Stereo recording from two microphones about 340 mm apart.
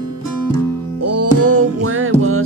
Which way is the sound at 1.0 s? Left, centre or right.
Right.